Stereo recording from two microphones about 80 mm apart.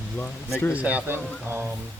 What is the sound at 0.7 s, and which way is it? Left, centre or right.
Speech, centre.